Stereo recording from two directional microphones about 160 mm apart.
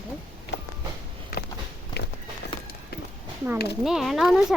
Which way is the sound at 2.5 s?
30° left (ahead or behind).